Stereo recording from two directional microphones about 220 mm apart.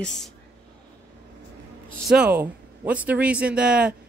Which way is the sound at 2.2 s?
5° right (ahead or behind).